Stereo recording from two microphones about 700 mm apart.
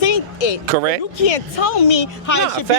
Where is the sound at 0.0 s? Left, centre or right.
Left.